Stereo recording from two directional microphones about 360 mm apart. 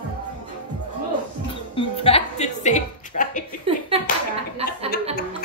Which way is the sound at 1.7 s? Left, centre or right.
Centre.